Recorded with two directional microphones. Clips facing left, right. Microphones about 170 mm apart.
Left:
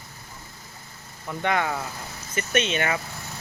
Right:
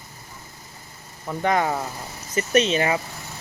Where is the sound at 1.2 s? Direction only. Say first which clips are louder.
Right 3 dB; 35° right (ahead or behind).